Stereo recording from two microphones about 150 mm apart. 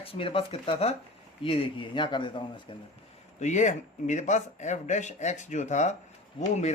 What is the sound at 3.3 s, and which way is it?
Speech, 50° left (ahead or behind).